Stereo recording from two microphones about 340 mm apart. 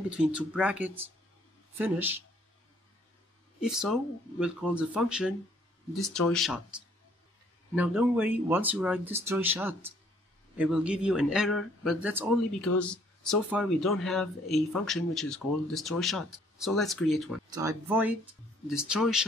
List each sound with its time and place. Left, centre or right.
0.3 s speech: centre
3.6 s speech: centre